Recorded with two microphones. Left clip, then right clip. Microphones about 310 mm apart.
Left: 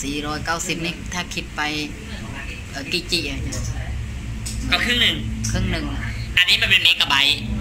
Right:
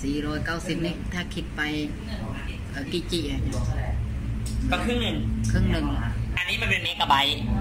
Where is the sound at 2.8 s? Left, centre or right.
Centre.